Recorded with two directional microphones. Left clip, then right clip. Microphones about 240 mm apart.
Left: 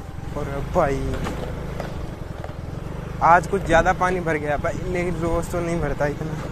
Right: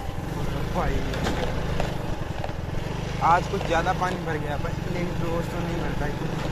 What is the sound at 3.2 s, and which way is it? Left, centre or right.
Speech, left.